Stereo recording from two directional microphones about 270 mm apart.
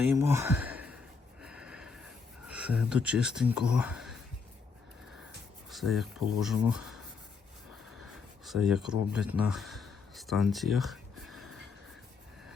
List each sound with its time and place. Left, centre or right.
0.1 s speech: centre
1.4 s snort: centre
2.5 s speech: centre
5.7 s speech: centre
8.4 s speech: centre